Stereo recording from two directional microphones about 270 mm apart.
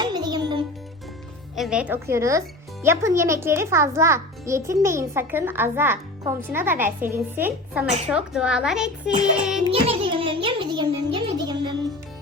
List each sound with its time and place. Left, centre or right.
0.0 s music: centre
1.5 s a child's voice: centre
9.6 s music: centre